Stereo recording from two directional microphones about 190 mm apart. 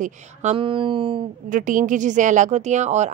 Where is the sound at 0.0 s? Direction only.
40° right (ahead or behind).